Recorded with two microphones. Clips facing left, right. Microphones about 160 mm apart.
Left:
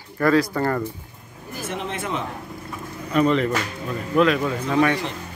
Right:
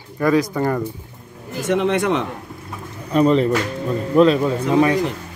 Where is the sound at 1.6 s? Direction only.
75° right (ahead or behind).